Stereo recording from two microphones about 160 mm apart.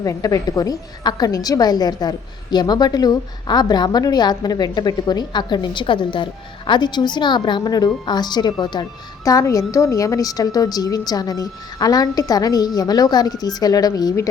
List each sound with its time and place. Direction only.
0.0 s a woman's voice: 20° left (ahead or behind)